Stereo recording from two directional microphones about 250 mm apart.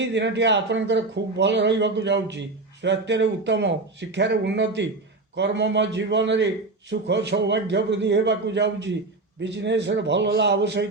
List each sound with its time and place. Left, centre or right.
0.0 s speech: right